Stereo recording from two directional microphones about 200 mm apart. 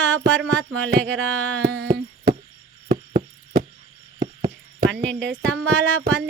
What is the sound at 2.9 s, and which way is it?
Knock, 20° right (ahead or behind).